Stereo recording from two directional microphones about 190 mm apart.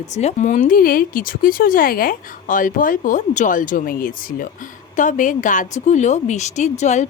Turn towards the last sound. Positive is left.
turn(degrees=35)  # may be behind; listen again after turning